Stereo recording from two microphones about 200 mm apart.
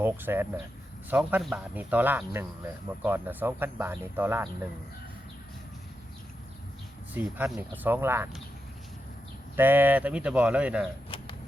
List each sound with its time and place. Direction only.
0.0 s speech: 10° right (ahead or behind)
7.1 s speech: 10° right (ahead or behind)
9.6 s speech: 10° right (ahead or behind)
11.1 s a sound: 25° left (ahead or behind)